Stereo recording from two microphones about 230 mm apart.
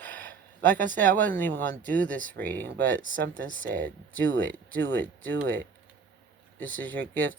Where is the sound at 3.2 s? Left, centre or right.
Right.